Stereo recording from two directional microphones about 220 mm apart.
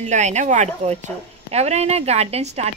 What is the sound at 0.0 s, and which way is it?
Speech, 30° right (ahead or behind).